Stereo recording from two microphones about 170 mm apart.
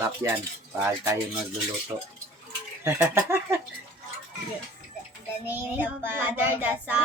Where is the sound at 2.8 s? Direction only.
15° right (ahead or behind).